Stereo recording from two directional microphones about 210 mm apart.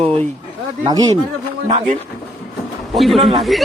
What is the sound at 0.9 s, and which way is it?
Speech, 20° right (ahead or behind).